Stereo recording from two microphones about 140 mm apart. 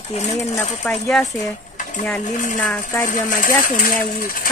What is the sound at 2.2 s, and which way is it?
Speech, 65° left (ahead or behind).